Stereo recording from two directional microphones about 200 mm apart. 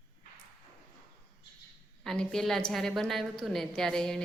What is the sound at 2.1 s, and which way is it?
A woman's voice, centre (ahead or behind).